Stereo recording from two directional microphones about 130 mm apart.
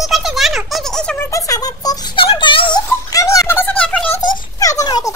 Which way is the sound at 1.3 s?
25° left (ahead or behind).